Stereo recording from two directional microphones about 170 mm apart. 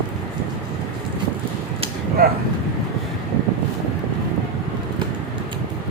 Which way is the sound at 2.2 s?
60° right (ahead or behind).